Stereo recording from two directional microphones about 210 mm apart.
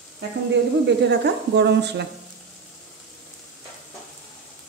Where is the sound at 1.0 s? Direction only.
55° right (ahead or behind).